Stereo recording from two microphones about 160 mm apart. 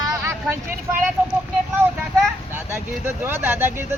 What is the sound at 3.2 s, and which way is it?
Speech, 15° right (ahead or behind).